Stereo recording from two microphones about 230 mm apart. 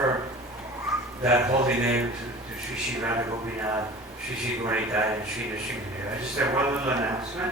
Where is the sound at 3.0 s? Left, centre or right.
Centre.